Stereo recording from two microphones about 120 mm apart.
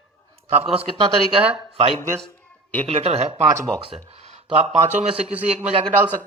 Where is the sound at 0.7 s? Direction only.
50° right (ahead or behind).